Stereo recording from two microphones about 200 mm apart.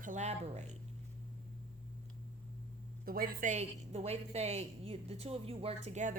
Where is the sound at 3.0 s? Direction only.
45° right (ahead or behind).